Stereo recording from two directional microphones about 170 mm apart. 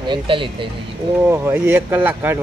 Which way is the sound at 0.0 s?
30° right (ahead or behind).